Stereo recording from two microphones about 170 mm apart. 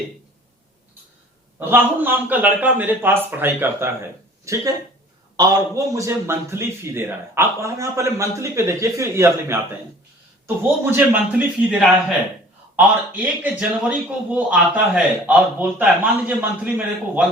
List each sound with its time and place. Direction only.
1.5 s a man's voice: 10° right (ahead or behind)